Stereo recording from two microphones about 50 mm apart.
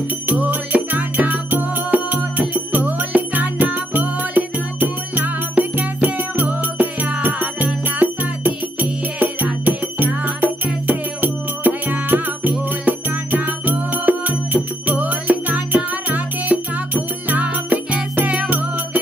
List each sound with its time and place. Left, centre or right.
0.3 s music: right